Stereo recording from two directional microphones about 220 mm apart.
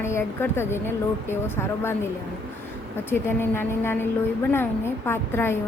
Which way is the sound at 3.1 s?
10° left (ahead or behind).